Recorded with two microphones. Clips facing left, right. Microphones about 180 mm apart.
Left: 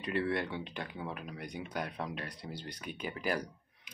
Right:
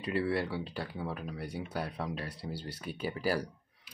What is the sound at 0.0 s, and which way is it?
Speech, 30° right (ahead or behind).